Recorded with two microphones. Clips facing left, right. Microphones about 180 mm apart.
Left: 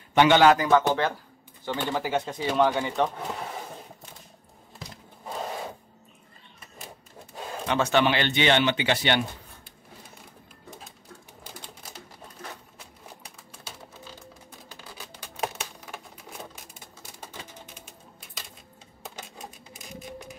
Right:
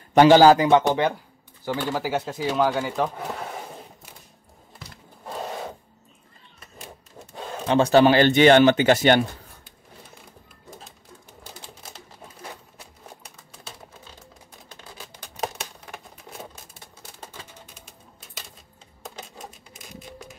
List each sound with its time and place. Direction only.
0.1 s speech: 35° right (ahead or behind); by 3.4 s 5° right (ahead or behind)
7.6 s speech: 30° right (ahead or behind)